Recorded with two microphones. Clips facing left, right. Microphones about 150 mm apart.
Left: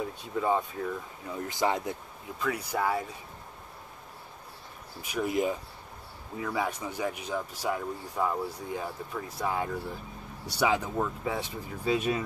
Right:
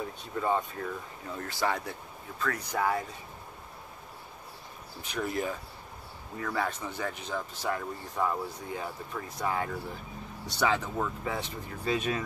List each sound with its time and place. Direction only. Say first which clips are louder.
0.4 s speech: left 2 dB; 10° left (ahead or behind)
5.0 s speech: left 4 dB; 10° left (ahead or behind)